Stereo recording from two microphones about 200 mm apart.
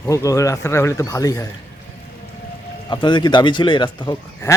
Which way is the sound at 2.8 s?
25° left (ahead or behind).